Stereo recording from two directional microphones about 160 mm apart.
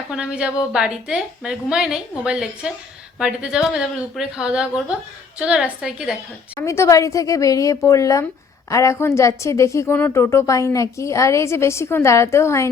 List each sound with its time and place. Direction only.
0.1 s a woman's voice: 5° right (ahead or behind)
6.6 s a woman's voice: 20° left (ahead or behind)